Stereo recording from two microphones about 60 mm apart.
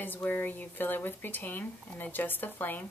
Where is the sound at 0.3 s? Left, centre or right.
Left.